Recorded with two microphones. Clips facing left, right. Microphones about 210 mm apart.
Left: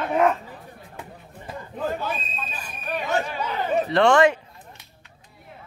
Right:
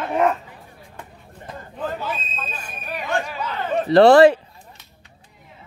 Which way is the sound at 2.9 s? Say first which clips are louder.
Even; centre (ahead or behind).